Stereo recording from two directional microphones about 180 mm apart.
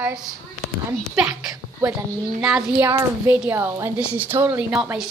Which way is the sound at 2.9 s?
15° right (ahead or behind).